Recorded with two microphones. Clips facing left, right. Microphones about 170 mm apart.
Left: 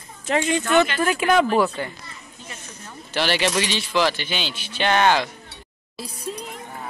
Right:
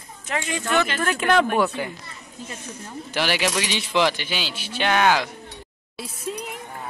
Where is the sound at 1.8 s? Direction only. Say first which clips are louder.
Even; 10° right (ahead or behind).